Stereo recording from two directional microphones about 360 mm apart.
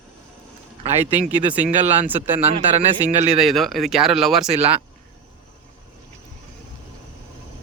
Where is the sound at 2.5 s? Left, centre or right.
Centre.